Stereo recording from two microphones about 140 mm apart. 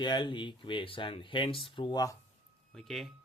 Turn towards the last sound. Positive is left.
turn(degrees=0)  # may be behind; listen again after turning